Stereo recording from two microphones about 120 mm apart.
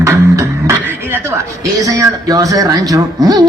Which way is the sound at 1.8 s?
30° right (ahead or behind).